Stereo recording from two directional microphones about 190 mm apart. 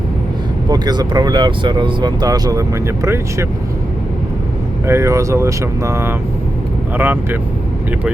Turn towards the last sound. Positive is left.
turn(degrees=-10)  # may be behind; listen again after turning